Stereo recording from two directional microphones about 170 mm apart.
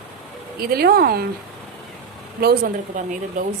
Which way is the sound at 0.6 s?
65° right (ahead or behind).